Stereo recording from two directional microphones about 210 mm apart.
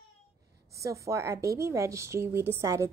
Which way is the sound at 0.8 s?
15° right (ahead or behind).